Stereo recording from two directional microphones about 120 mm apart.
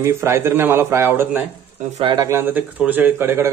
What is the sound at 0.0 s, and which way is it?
Speech, 20° right (ahead or behind).